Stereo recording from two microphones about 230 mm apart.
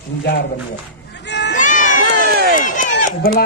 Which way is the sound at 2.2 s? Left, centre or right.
Right.